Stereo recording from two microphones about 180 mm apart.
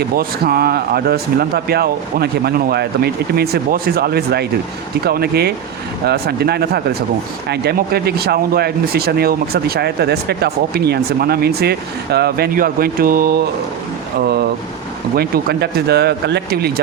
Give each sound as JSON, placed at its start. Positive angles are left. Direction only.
{"t": 0.0, "sound": "speech", "side_deg": -55}
{"t": 15.1, "sound": "speech", "side_deg": -60}